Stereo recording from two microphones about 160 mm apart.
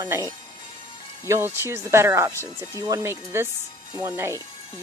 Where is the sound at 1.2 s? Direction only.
15° right (ahead or behind).